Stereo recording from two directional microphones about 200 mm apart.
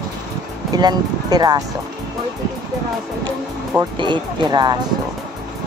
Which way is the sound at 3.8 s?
20° right (ahead or behind).